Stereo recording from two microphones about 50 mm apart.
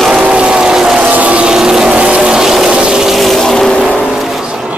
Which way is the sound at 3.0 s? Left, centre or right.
Centre.